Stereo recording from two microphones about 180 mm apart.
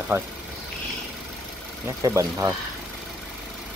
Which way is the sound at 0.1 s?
15° right (ahead or behind).